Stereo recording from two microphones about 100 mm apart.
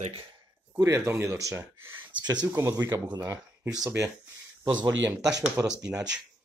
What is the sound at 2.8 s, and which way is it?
Speech, 45° right (ahead or behind).